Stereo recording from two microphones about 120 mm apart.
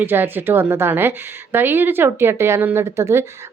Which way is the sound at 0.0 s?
15° right (ahead or behind).